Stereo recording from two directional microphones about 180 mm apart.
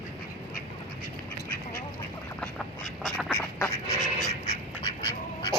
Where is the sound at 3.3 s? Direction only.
10° left (ahead or behind).